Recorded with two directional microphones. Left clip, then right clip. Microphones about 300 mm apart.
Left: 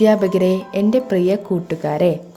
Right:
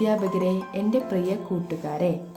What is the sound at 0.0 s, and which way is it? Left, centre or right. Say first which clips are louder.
A woman's voice: left 9 dB; left.